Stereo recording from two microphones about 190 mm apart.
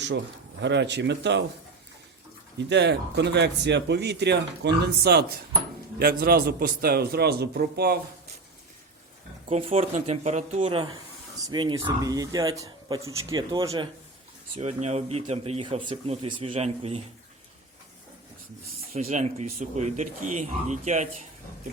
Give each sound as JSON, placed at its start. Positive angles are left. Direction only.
{"t": 0.6, "sound": "speech", "side_deg": -65}
{"t": 2.6, "sound": "speech", "side_deg": -65}
{"t": 9.5, "sound": "speech", "side_deg": -30}
{"t": 11.3, "sound": "speech", "side_deg": -20}
{"t": 14.5, "sound": "speech", "side_deg": -35}
{"t": 18.9, "sound": "speech", "side_deg": -35}